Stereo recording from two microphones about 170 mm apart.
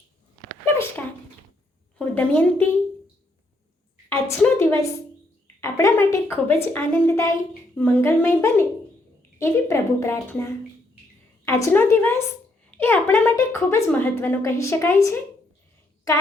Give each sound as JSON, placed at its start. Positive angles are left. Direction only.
{"t": 2.0, "sound": "a woman's voice", "side_deg": 10}
{"t": 4.1, "sound": "a woman's voice", "side_deg": 15}